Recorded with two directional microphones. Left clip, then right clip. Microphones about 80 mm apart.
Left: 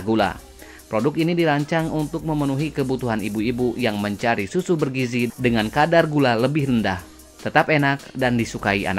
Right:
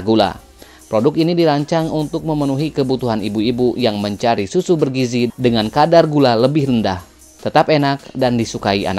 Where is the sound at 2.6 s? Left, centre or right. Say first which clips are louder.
Right 6 dB; right.